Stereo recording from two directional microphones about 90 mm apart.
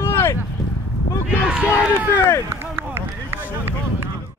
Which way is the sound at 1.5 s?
10° right (ahead or behind).